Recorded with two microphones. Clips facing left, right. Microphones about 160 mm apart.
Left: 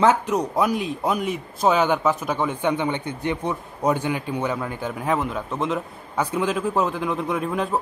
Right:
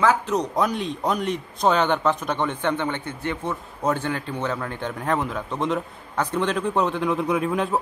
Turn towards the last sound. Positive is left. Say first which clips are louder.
# right 1 dB
turn(degrees=0)  # may be behind; listen again after turning